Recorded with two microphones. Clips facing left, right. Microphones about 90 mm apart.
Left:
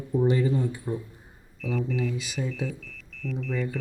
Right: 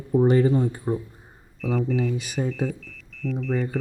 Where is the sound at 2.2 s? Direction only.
50° right (ahead or behind).